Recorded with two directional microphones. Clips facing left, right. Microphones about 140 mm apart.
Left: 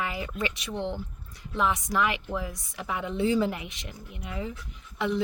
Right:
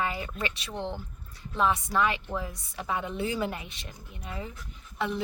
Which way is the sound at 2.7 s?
25° right (ahead or behind).